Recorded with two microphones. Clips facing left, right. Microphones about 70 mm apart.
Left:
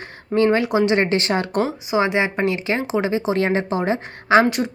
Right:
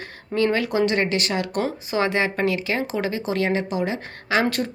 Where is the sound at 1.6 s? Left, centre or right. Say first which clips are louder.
Left 3 dB; centre.